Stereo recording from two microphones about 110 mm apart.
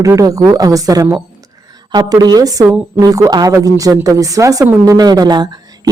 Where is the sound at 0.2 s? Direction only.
30° right (ahead or behind).